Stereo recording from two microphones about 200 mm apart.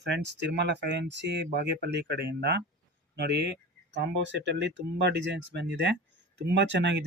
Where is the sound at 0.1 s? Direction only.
60° right (ahead or behind).